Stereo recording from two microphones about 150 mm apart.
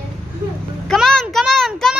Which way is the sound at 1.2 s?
Centre (ahead or behind).